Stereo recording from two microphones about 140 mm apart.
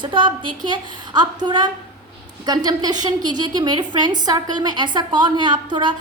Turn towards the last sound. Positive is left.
turn(degrees=-35)  # may be behind; listen again after turning